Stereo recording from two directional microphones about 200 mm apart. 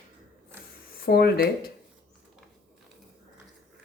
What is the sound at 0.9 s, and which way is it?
Speech, 50° left (ahead or behind).